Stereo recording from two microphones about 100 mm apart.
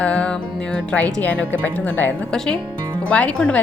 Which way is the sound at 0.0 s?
10° left (ahead or behind).